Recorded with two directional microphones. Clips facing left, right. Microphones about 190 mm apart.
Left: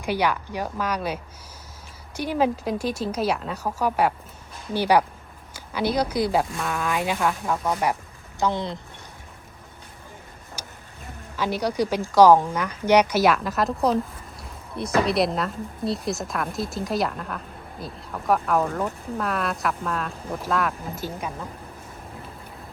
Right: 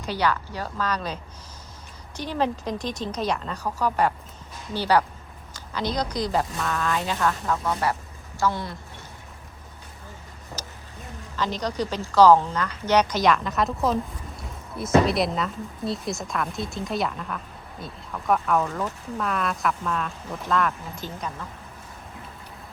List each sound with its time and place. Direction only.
0.0 s a woman's voice: 10° left (ahead or behind)
10.6 s vehicle: 10° left (ahead or behind)
11.3 s a woman's voice: 10° left (ahead or behind)